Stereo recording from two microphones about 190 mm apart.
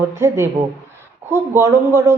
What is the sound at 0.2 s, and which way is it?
Speech, 15° right (ahead or behind).